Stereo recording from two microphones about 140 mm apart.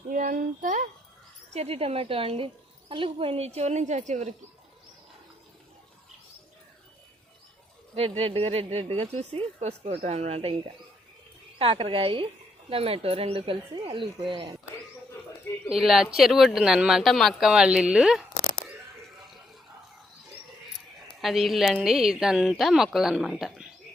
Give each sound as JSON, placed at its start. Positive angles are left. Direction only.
{"t": 0.1, "sound": "a sound", "side_deg": -75}
{"t": 1.5, "sound": "speech", "side_deg": -45}
{"t": 8.2, "sound": "speech", "side_deg": -45}
{"t": 15.7, "sound": "a woman's voice", "side_deg": -5}
{"t": 21.1, "sound": "a woman's voice", "side_deg": 0}